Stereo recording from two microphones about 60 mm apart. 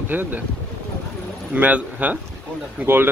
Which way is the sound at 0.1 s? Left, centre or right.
Right.